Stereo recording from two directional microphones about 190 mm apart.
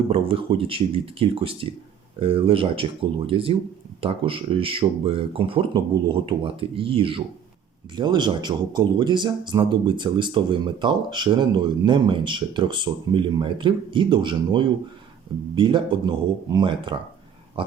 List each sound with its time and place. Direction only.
0.1 s speech: 30° right (ahead or behind)